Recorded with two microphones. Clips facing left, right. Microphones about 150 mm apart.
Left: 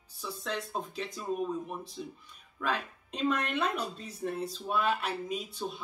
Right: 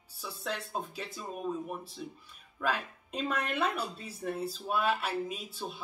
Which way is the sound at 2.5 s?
5° right (ahead or behind).